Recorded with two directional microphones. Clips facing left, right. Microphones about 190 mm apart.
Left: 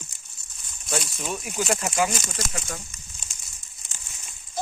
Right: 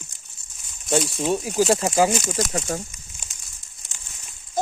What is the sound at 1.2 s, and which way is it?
Speech, 30° right (ahead or behind).